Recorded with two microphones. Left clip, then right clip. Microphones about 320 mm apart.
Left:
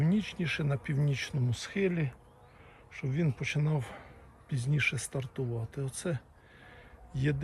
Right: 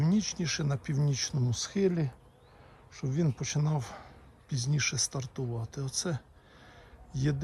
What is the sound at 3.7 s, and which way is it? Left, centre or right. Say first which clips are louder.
Speech: even; right.